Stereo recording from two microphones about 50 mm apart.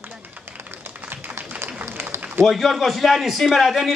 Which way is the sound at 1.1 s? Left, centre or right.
Right.